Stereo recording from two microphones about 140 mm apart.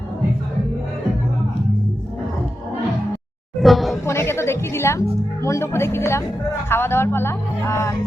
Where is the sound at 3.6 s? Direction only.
Centre (ahead or behind).